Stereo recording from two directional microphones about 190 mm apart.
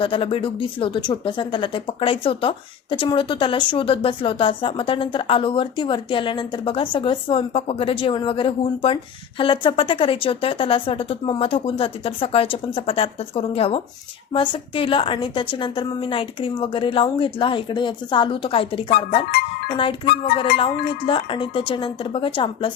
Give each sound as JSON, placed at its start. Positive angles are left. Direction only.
{"t": 0.0, "sound": "speech", "side_deg": 30}
{"t": 21.1, "sound": "speech", "side_deg": 25}